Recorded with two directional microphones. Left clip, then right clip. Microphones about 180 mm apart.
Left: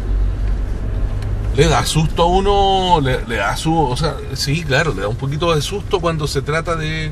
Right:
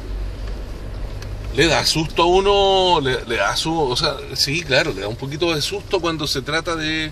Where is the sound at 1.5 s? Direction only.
50° right (ahead or behind).